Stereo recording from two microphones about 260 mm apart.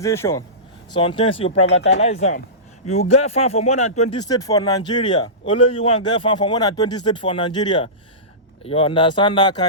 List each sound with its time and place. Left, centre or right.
0.0 s speech: centre